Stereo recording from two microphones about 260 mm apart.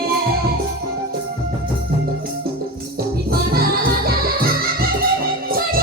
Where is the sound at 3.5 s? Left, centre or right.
Right.